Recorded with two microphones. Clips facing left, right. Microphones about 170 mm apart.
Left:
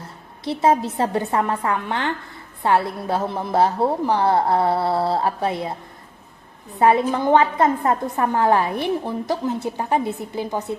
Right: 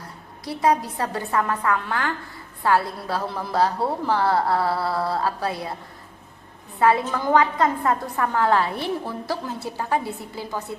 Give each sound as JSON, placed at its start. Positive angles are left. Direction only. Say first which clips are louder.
{"t": 0.4, "sound": "a woman's voice", "louder": "left 3 dB", "side_deg": 25}
{"t": 6.7, "sound": "a woman's voice", "louder": "left 3 dB", "side_deg": 20}